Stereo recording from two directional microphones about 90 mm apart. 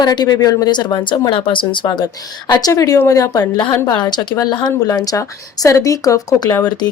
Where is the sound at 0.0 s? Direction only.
50° left (ahead or behind).